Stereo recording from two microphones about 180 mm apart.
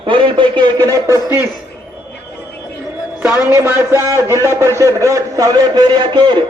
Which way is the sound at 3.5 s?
10° right (ahead or behind).